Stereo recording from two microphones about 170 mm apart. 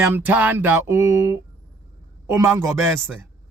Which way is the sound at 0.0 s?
15° right (ahead or behind).